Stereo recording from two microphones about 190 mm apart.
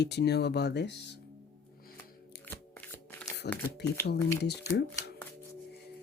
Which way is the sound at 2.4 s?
10° left (ahead or behind).